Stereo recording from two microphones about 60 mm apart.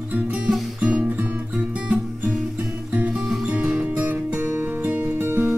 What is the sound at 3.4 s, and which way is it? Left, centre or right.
Music, centre.